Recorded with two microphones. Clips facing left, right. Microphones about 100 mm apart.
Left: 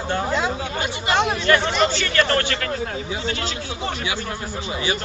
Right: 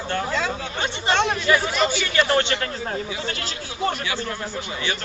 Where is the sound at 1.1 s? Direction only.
5° left (ahead or behind); by 2.6 s 20° right (ahead or behind).